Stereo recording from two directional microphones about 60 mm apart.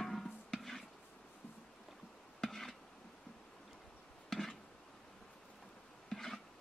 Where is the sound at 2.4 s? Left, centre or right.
Centre.